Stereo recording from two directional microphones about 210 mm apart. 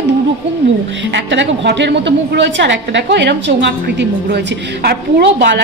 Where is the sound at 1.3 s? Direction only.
55° right (ahead or behind).